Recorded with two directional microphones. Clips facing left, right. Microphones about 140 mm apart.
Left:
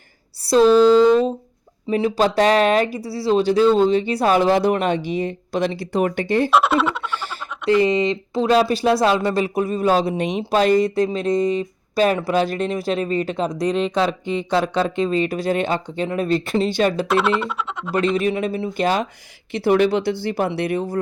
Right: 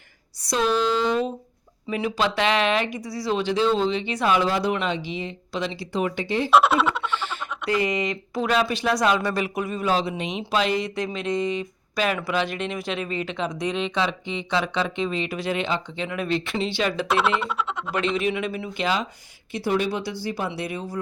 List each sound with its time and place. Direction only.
0.4 s a sound: 35° left (ahead or behind)
1.9 s speech: 35° left (ahead or behind)
4.4 s speech: 50° left (ahead or behind)
6.5 s a sound: centre (ahead or behind)
7.7 s speech: 25° left (ahead or behind); by 17.1 s 45° left (ahead or behind)
17.1 s speech: centre (ahead or behind)
17.9 s speech: 40° left (ahead or behind)
19.5 s speech: 65° left (ahead or behind)